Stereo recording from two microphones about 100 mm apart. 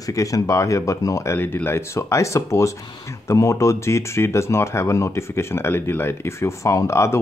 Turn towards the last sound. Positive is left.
turn(degrees=30)  # may be behind; listen again after turning